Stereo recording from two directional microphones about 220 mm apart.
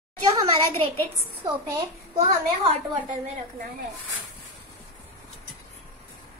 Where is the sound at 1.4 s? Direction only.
15° right (ahead or behind).